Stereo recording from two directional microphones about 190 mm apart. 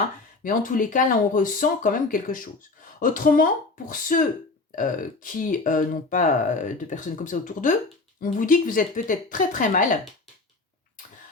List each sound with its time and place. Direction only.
0.4 s speech: 45° left (ahead or behind)